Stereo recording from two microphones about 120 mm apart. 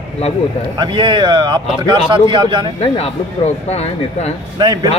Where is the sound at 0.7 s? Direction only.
40° right (ahead or behind).